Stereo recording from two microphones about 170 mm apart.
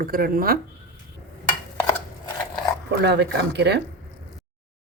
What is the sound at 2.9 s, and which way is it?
Speech, 80° right.